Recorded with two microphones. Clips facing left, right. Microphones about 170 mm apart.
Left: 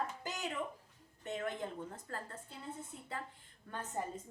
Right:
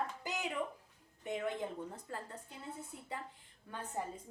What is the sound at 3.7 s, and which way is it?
Speech, 10° right (ahead or behind).